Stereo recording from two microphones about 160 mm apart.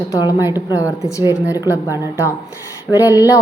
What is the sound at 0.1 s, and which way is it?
Speech, 25° left (ahead or behind).